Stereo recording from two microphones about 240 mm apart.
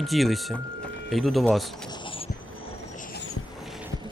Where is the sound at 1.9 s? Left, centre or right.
Centre.